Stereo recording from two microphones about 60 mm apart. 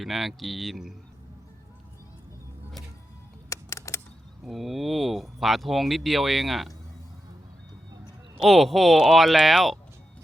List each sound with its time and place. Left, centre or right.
0.0 s speech: centre
3.5 s typing: left
4.4 s speech: centre
8.4 s speech: centre